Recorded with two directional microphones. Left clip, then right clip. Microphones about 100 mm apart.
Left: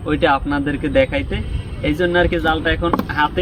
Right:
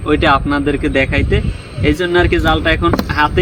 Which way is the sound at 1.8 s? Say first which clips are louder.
Right 3 dB; 35° left (ahead or behind).